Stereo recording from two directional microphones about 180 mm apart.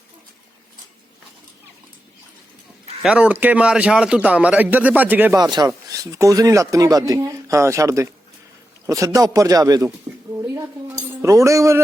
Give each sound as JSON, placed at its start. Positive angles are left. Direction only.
{"t": 3.0, "sound": "a man's voice", "side_deg": -5}
{"t": 5.4, "sound": "speech", "side_deg": -25}